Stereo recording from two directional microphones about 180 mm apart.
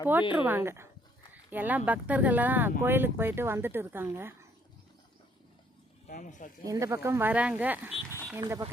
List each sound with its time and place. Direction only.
0.1 s speech: 10° right (ahead or behind)
6.1 s speech: 50° left (ahead or behind)
6.7 s speech: 15° right (ahead or behind)